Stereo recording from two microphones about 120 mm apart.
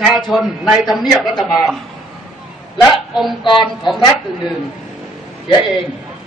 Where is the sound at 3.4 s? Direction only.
40° left (ahead or behind).